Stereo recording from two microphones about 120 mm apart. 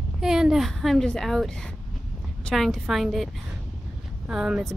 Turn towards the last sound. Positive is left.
turn(degrees=-5)  # may be behind; listen again after turning